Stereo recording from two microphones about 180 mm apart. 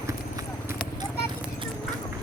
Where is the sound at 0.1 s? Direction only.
15° right (ahead or behind).